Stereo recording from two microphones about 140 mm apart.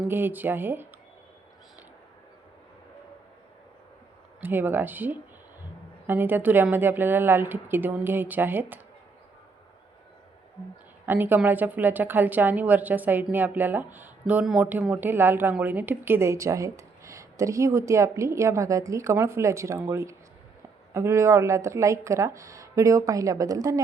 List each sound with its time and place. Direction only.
0.1 s a woman's voice: 15° right (ahead or behind)
4.4 s a woman's voice: 15° right (ahead or behind)
11.0 s a woman's voice: 15° right (ahead or behind)